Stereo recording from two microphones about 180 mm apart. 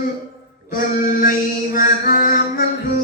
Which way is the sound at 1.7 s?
50° left (ahead or behind).